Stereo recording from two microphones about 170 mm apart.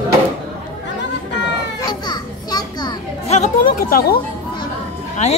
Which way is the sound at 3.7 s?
60° left (ahead or behind).